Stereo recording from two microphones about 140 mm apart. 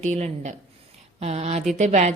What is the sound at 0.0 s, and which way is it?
A woman's voice, 55° right (ahead or behind).